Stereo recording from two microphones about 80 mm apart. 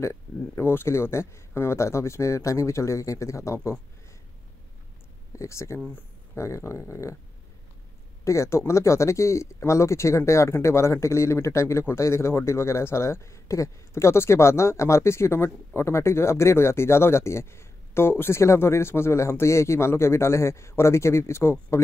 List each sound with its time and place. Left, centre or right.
0.0 s speech: left
5.3 s speech: left
8.2 s speech: left